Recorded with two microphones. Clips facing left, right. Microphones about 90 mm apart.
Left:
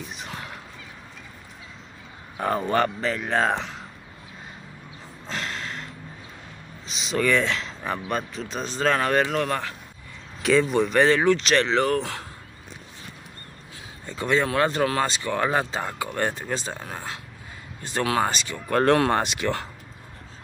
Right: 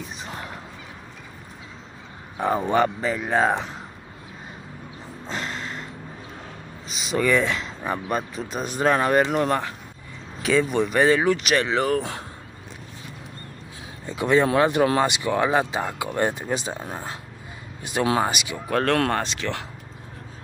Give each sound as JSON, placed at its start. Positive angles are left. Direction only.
{"t": 0.2, "sound": "fowl", "side_deg": -35}
{"t": 2.3, "sound": "speech", "side_deg": -15}
{"t": 5.2, "sound": "a sound", "side_deg": -5}
{"t": 6.9, "sound": "speech", "side_deg": -5}
{"t": 10.4, "sound": "speech", "side_deg": 0}
{"t": 12.0, "sound": "speech", "side_deg": -20}
{"t": 14.0, "sound": "speech", "side_deg": -15}
{"t": 18.2, "sound": "speech", "side_deg": -10}
{"t": 18.9, "sound": "speech", "side_deg": 5}